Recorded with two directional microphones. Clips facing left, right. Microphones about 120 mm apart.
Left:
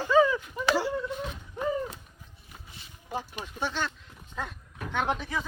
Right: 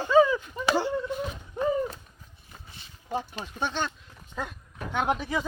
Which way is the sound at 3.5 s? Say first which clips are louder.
Right 2 dB; 20° right (ahead or behind).